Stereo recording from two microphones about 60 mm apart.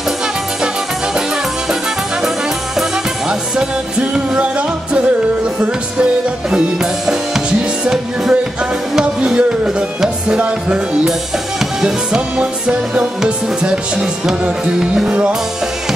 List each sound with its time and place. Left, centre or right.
3.3 s music: centre
6.5 s music: centre